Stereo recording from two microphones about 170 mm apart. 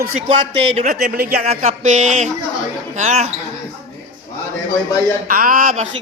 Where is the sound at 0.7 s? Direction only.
45° right (ahead or behind).